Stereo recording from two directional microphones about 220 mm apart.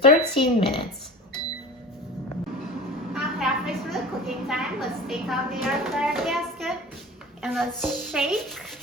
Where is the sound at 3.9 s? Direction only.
Centre (ahead or behind).